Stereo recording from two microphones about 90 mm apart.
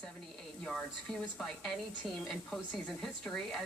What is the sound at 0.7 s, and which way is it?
Speech, 5° left (ahead or behind).